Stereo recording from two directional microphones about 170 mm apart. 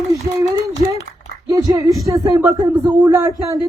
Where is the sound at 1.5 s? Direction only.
20° right (ahead or behind).